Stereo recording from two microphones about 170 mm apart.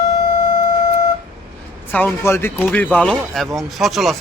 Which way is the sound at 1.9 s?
10° left (ahead or behind).